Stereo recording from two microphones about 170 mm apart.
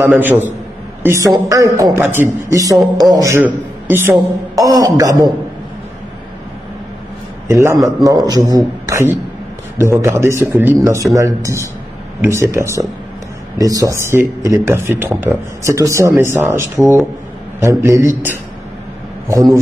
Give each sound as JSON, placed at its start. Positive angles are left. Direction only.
{"t": 0.0, "sound": "speech", "side_deg": -10}
{"t": 7.4, "sound": "a man's voice", "side_deg": -15}